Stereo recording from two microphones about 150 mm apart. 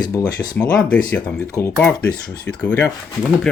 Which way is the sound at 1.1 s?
10° left (ahead or behind).